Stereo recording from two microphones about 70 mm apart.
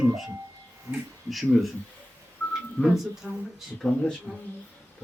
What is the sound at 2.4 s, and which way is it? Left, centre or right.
Telephone dialing, left.